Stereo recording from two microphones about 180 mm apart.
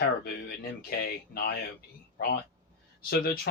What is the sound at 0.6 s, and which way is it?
Speech, 55° left (ahead or behind).